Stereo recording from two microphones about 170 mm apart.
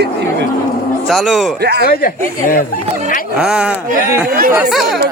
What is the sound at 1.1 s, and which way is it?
Speech, centre (ahead or behind).